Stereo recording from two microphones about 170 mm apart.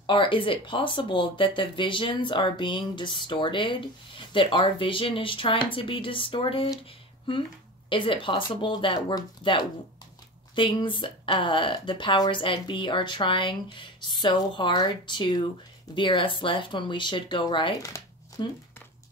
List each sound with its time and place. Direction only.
0.0 s speech: 30° left (ahead or behind)
7.9 s speech: 30° left (ahead or behind)
17.9 s a sound: 20° left (ahead or behind)